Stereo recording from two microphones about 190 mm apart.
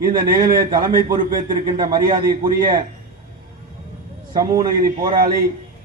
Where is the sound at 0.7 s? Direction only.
45° right (ahead or behind).